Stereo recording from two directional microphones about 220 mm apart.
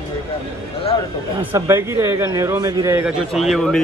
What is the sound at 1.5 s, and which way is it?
A man's voice, 10° right (ahead or behind).